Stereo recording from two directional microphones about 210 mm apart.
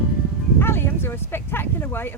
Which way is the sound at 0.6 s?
10° left (ahead or behind).